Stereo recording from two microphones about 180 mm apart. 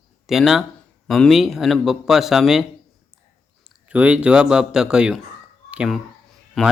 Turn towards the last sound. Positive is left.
turn(degrees=0)  # may be behind; listen again after turning